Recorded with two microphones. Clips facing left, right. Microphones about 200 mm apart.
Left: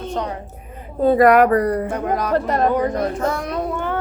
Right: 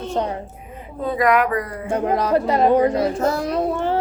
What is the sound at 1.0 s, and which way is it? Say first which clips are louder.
Speech: left 6 dB; 45° left (ahead or behind).